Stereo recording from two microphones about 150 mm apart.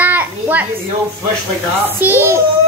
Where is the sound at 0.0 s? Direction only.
10° right (ahead or behind).